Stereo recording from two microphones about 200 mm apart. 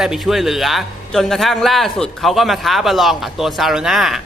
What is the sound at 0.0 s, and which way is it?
A woman's voice, centre (ahead or behind).